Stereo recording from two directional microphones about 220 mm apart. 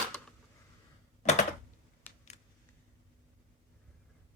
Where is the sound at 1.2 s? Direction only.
30° left (ahead or behind).